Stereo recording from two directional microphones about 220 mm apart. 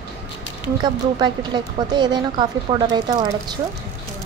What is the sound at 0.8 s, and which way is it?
A woman's voice, 20° right (ahead or behind).